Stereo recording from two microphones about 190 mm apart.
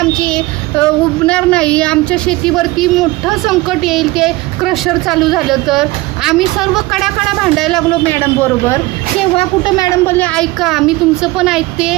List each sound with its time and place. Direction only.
0.1 s speech: 5° left (ahead or behind)
9.4 s speech: 20° left (ahead or behind); by 11.9 s 5° right (ahead or behind)